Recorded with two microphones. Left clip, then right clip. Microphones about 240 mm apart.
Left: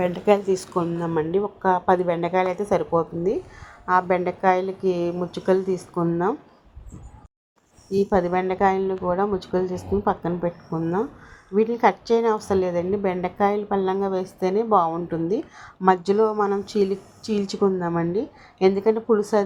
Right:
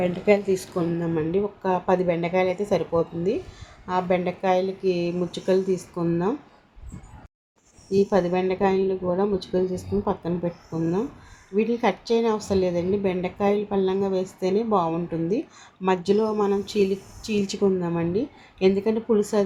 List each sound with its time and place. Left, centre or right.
0.0 s speech: left
7.9 s speech: centre
8.1 s speech: left